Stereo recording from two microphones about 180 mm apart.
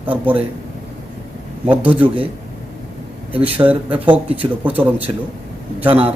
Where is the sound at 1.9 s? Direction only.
30° right (ahead or behind).